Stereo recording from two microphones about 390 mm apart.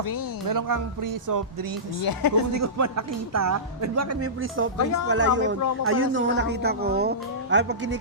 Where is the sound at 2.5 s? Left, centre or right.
Right.